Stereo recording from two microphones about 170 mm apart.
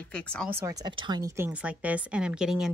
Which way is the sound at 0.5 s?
20° right (ahead or behind).